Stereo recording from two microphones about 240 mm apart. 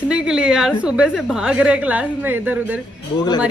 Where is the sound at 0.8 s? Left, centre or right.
Centre.